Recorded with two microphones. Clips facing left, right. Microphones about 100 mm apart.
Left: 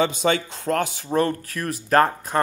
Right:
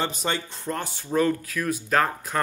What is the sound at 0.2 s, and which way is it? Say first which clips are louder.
Speech: left 7 dB; 90° left.